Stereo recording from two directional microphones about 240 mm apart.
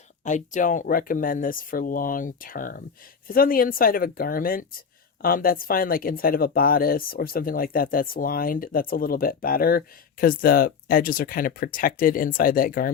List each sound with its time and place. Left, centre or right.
0.3 s speech: left